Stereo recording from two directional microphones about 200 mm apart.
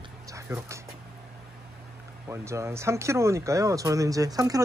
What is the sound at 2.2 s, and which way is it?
Speech, 15° right (ahead or behind).